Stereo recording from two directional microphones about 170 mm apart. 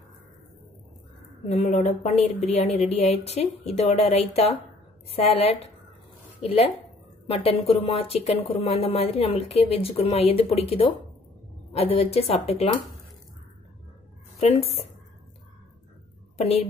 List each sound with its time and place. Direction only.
1.5 s speech: 40° left (ahead or behind)
11.7 s speech: 35° left (ahead or behind)
14.4 s speech: 35° left (ahead or behind)
16.3 s a woman's voice: 40° left (ahead or behind)